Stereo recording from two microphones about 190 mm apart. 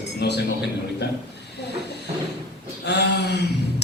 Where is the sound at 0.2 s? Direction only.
60° left (ahead or behind).